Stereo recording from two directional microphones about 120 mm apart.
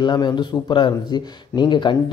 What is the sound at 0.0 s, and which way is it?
Speech, 40° left (ahead or behind).